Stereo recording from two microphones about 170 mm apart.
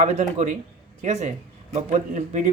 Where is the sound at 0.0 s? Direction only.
40° right (ahead or behind).